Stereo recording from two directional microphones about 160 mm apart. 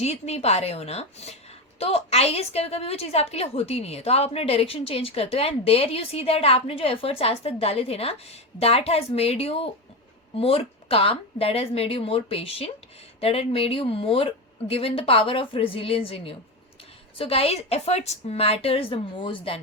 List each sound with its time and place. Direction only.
0.0 s a woman's voice: 40° left (ahead or behind)